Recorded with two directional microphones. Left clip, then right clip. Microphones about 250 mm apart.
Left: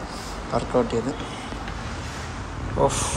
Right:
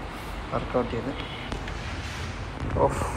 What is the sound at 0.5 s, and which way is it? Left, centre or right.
Speech, centre.